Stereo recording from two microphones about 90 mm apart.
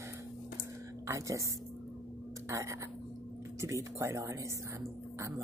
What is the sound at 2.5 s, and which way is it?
Speech, 35° right (ahead or behind).